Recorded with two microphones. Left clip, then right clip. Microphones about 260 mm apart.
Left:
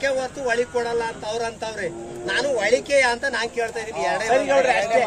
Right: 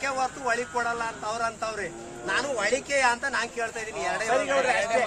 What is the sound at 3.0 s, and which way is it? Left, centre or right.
Speech, right.